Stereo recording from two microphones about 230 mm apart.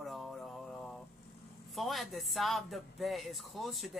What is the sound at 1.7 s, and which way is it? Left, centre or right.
Speech, centre.